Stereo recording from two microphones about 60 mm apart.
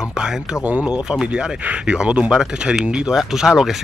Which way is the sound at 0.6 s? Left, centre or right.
Right.